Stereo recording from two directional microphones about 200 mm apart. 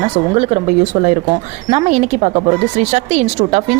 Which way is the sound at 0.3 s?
35° right (ahead or behind).